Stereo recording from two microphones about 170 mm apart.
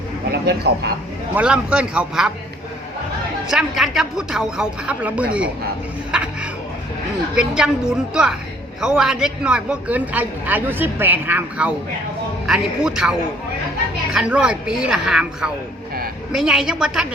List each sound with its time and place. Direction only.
0.3 s speech: 70° right (ahead or behind)
1.4 s speech: 5° right (ahead or behind)
3.5 s speech: 5° right (ahead or behind)
6.1 s music: 5° right (ahead or behind)
7.3 s a woman's voice: 5° right (ahead or behind)